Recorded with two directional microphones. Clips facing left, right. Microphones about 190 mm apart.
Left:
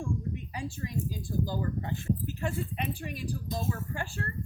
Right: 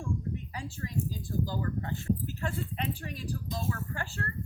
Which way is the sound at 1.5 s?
15° left (ahead or behind).